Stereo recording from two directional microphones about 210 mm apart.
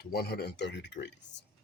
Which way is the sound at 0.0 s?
50° left (ahead or behind).